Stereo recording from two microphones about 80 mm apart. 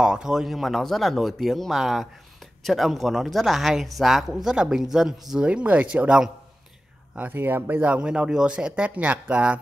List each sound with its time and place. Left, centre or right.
0.0 s speech: centre
7.2 s speech: right